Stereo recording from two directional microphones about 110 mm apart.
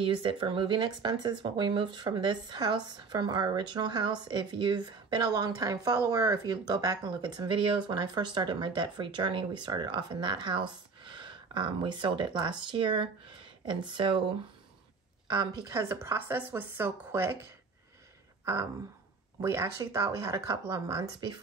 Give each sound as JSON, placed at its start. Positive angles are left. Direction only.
{"t": 0.0, "sound": "a woman's voice", "side_deg": -50}
{"t": 15.2, "sound": "a woman's voice", "side_deg": -40}
{"t": 15.7, "sound": "speech", "side_deg": -25}
{"t": 18.4, "sound": "a sound", "side_deg": -25}
{"t": 19.4, "sound": "speech", "side_deg": -25}